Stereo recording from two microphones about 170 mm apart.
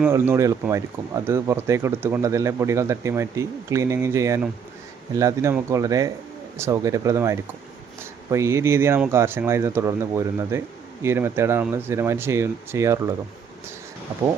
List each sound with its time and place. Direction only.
0.0 s speech: 15° right (ahead or behind)